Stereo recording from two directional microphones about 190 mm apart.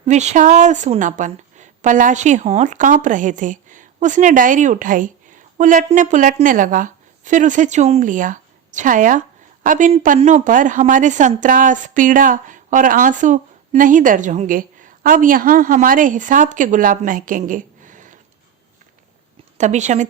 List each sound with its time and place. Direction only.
0.0 s a woman's voice: 35° right (ahead or behind)
19.5 s a woman's voice: 40° right (ahead or behind)